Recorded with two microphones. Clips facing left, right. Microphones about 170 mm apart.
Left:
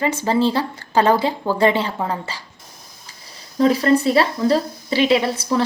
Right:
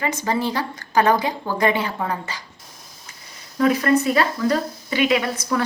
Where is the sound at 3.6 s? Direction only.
30° left (ahead or behind).